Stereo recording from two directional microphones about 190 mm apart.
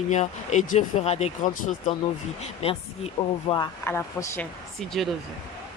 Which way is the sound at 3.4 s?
20° left (ahead or behind).